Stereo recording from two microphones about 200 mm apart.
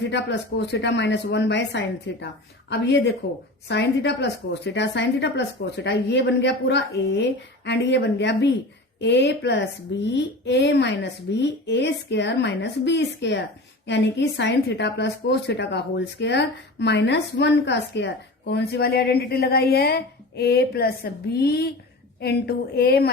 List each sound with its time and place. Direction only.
0.1 s a woman's voice: 60° left (ahead or behind)